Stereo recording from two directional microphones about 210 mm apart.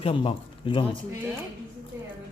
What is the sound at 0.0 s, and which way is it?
Speech, 25° left (ahead or behind).